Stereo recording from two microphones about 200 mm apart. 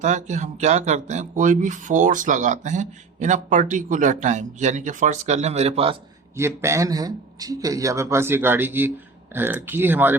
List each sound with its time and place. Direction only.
0.0 s speech: 35° right (ahead or behind)
6.3 s speech: 15° right (ahead or behind)